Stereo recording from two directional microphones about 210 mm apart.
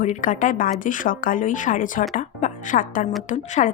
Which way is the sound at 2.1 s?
40° left (ahead or behind).